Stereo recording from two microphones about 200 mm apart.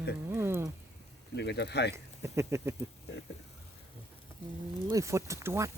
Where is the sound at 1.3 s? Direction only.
60° left (ahead or behind).